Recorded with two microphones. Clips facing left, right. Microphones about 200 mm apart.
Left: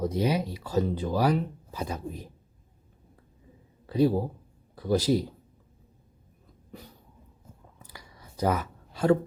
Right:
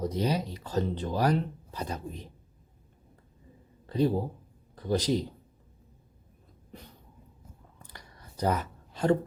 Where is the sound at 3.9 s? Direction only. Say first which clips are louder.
Left 3 dB; 10° left (ahead or behind).